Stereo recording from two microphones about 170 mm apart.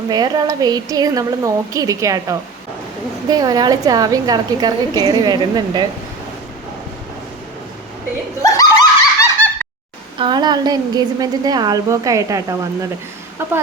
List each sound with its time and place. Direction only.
0.1 s a woman's voice: 25° right (ahead or behind)
8.4 s snicker: 20° left (ahead or behind)
10.2 s a woman's voice: 25° right (ahead or behind)